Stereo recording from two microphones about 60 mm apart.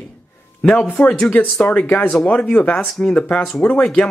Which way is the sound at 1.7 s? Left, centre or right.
Left.